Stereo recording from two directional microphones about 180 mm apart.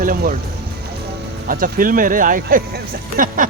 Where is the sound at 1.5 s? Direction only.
50° right (ahead or behind).